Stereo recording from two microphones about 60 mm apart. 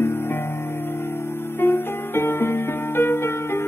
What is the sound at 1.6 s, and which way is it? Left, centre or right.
Music, left.